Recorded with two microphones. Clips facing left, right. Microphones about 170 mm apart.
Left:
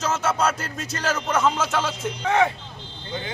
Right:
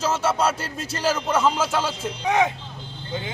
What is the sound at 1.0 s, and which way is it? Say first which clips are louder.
Speech: right 1 dB; 10° right (ahead or behind).